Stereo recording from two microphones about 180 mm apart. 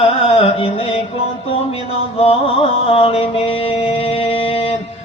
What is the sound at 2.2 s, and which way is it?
Mantra, 30° left (ahead or behind).